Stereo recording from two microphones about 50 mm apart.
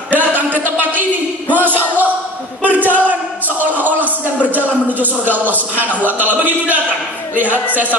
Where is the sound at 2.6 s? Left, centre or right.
Right.